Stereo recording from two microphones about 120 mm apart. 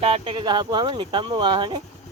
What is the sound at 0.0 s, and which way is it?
Speech, 50° right (ahead or behind).